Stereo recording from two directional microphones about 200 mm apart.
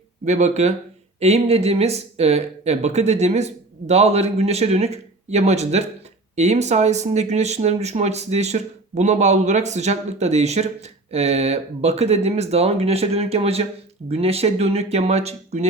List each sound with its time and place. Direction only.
0.3 s speech: 35° right (ahead or behind)